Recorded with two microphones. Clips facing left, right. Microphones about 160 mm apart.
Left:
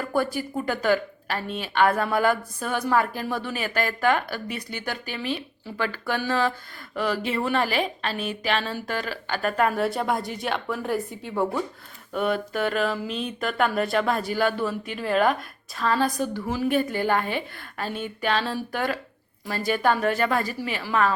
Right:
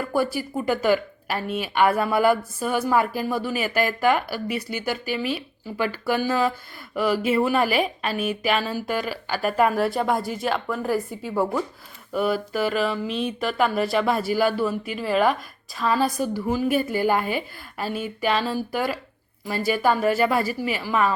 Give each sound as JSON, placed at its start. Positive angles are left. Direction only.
{"t": 0.0, "sound": "a woman's voice", "side_deg": -5}